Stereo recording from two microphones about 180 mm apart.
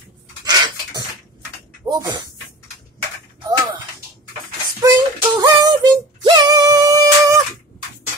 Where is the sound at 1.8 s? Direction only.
20° right (ahead or behind).